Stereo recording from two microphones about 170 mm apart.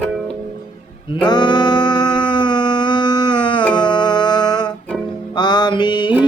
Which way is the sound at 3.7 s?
25° left (ahead or behind).